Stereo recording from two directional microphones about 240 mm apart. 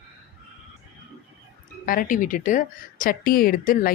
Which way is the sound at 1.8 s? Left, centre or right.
Left.